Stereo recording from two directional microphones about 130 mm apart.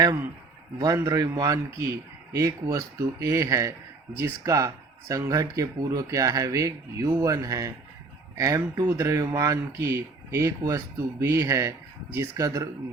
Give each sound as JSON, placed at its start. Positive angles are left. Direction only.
{"t": 0.0, "sound": "speech", "side_deg": -25}